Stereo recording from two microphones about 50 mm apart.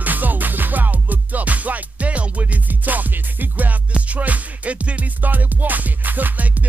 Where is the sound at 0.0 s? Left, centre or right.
Right.